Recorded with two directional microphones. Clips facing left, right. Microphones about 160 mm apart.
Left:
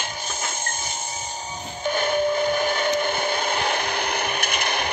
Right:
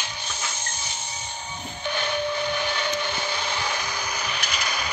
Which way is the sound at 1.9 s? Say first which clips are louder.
Left 5 dB; 45° left (ahead or behind).